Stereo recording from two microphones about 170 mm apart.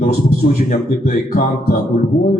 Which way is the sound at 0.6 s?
60° left (ahead or behind).